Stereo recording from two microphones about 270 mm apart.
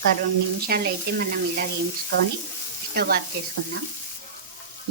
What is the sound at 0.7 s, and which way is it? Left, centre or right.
Speech, right.